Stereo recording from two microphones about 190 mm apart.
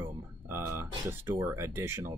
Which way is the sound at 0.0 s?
10° right (ahead or behind).